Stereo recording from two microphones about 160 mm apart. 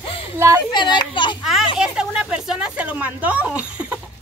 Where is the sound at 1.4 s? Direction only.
Centre (ahead or behind).